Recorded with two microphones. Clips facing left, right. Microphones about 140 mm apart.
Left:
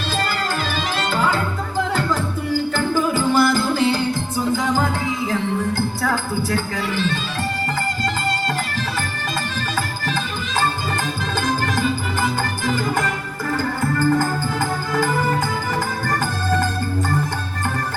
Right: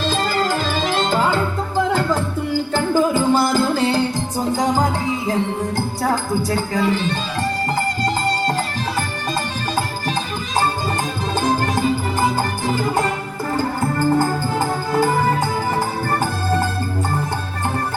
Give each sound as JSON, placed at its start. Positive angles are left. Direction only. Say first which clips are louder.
{"t": 2.7, "sound": "music", "louder": "right 6 dB", "side_deg": -25}
{"t": 6.0, "sound": "music", "louder": "right 2 dB", "side_deg": -35}
{"t": 11.3, "sound": "music", "louder": "right 3 dB", "side_deg": -35}